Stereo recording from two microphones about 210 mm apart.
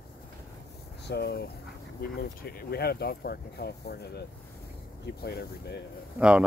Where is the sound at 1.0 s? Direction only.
50° left (ahead or behind).